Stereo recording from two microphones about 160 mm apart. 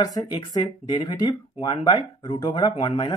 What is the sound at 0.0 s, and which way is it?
Speech, 25° left (ahead or behind).